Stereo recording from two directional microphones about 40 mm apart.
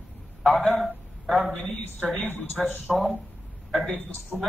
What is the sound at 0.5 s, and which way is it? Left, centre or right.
Speech, centre.